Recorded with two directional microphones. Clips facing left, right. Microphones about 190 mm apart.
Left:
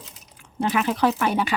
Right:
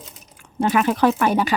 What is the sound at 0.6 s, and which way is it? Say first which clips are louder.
Speech: right 4 dB; 50° right (ahead or behind).